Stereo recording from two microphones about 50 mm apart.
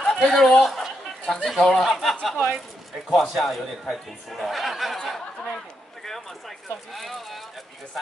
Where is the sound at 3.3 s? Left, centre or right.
Centre.